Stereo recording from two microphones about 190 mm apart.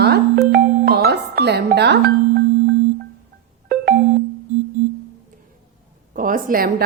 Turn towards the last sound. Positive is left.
turn(degrees=-50)  # may be behind; listen again after turning